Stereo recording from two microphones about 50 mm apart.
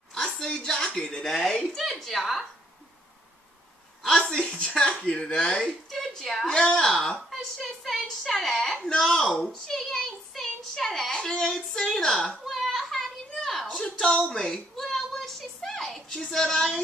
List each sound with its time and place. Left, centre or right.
0.1 s a sound: centre
4.3 s a woman's voice: centre
6.3 s speech: centre
7.5 s a woman's voice: centre
9.4 s a sound: centre
11.5 s speech: centre
12.4 s children playing: centre
13.7 s a sound: centre
16.1 s speech: centre